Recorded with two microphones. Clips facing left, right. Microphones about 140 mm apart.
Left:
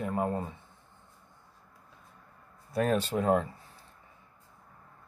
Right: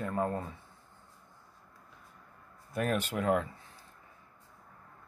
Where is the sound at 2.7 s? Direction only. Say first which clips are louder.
Left 4 dB; 35° left (ahead or behind).